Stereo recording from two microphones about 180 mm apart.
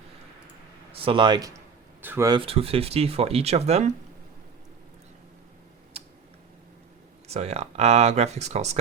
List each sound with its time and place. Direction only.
0.9 s speech: 30° right (ahead or behind)
6.0 s tick-tock: 35° right (ahead or behind)
7.3 s speech: 35° right (ahead or behind)